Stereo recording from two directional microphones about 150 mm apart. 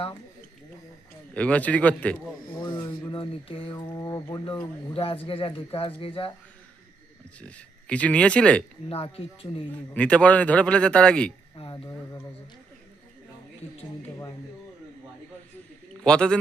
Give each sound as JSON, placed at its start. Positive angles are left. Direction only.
{"t": 1.3, "sound": "a man's voice", "side_deg": 10}
{"t": 2.6, "sound": "a sound", "side_deg": 30}
{"t": 3.1, "sound": "speech", "side_deg": 35}
{"t": 4.9, "sound": "speech", "side_deg": 40}
{"t": 7.3, "sound": "a man's voice", "side_deg": 10}
{"t": 8.9, "sound": "speech", "side_deg": 40}
{"t": 9.9, "sound": "a man's voice", "side_deg": 10}
{"t": 11.5, "sound": "speech", "side_deg": 35}
{"t": 16.0, "sound": "a man's voice", "side_deg": 5}